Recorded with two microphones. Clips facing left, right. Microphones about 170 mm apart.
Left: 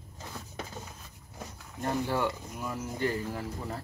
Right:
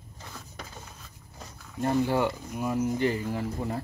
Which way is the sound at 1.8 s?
15° right (ahead or behind).